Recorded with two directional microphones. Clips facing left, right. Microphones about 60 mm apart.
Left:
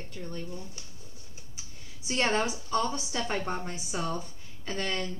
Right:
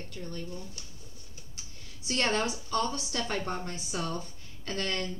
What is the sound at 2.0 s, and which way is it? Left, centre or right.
A woman's voice, left.